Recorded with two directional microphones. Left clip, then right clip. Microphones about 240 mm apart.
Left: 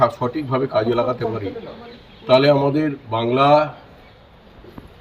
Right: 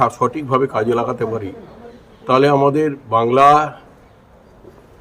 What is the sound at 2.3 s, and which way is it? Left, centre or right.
Speech, right.